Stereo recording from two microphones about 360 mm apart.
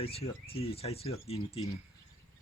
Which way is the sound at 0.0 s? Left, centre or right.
Centre.